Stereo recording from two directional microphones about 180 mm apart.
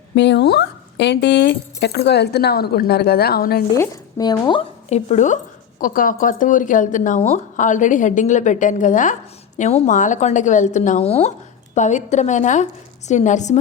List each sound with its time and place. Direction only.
0.2 s speech: 70° left (ahead or behind)
3.8 s speech: 20° left (ahead or behind)
4.9 s a woman's voice: 35° left (ahead or behind)